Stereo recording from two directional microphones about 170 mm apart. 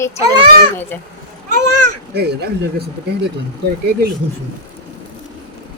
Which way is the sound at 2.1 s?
75° right (ahead or behind).